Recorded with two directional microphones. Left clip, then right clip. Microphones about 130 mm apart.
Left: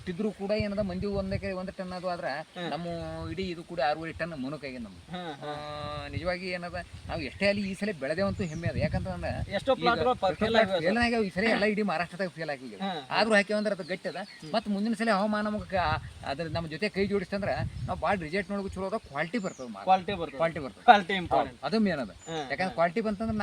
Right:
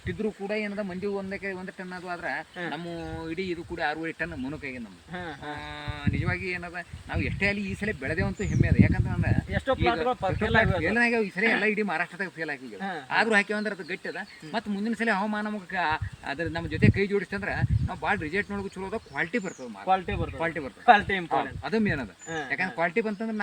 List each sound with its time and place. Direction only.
0.1 s speech: 30° left (ahead or behind)
3.2 s speech: 50° left (ahead or behind)
5.1 s speech: 15° left (ahead or behind)
6.1 s speech: 45° left (ahead or behind)
9.5 s speech: 10° left (ahead or behind)
10.8 s speech: 40° left (ahead or behind)
19.9 s speech: 15° left (ahead or behind)
20.4 s speech: 35° left (ahead or behind)
20.8 s speech: 10° left (ahead or behind)
21.3 s speech: 40° left (ahead or behind)